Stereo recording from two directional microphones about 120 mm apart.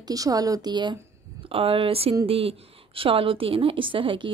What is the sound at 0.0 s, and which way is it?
Speech, 30° right (ahead or behind).